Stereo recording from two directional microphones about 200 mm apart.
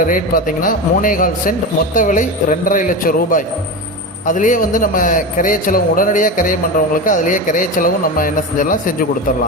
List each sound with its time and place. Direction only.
0.1 s a man's voice: 45° left (ahead or behind)